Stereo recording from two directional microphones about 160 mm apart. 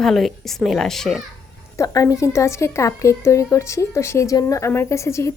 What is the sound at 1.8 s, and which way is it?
A woman's voice, 20° left (ahead or behind).